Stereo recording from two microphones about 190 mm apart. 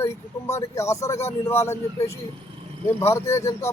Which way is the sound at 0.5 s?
15° left (ahead or behind).